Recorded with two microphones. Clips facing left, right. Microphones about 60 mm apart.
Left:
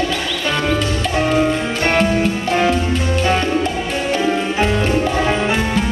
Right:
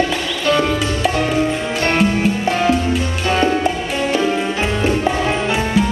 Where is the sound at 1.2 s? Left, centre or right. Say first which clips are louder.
Left 5 dB; left.